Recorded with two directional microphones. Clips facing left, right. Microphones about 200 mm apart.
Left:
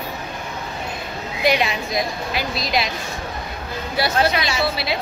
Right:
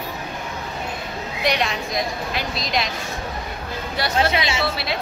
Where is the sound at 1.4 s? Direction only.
5° left (ahead or behind).